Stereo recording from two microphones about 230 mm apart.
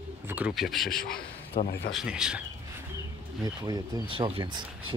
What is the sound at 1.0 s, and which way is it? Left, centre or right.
Speech, left.